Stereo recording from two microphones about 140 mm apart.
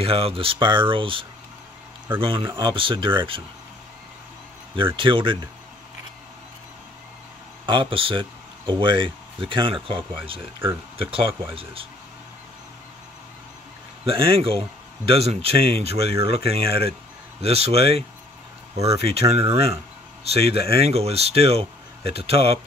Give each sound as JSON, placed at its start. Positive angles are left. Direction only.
{"t": 0.0, "sound": "speech", "side_deg": -40}
{"t": 4.7, "sound": "speech", "side_deg": -35}
{"t": 7.6, "sound": "speech", "side_deg": -40}
{"t": 11.5, "sound": "speech", "side_deg": -40}
{"t": 14.0, "sound": "speech", "side_deg": -40}